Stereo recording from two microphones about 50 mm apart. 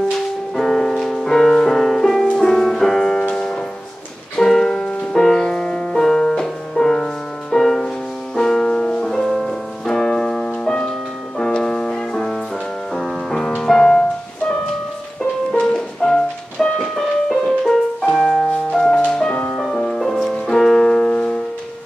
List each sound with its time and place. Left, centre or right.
0.6 s music: centre
15.5 s music: centre
16.8 s music: centre